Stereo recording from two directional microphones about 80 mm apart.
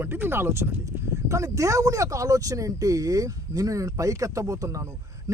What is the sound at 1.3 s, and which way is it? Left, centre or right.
Speech, right.